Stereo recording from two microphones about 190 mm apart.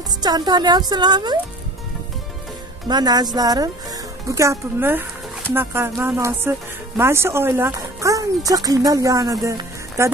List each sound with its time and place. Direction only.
0.2 s speech: 20° right (ahead or behind)
2.9 s speech: 20° right (ahead or behind)